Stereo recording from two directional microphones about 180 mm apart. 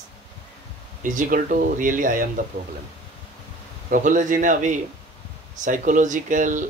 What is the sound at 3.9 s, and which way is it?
Speech, 45° right (ahead or behind).